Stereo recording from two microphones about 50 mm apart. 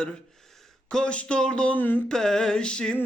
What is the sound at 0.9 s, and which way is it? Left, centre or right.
Speech, centre.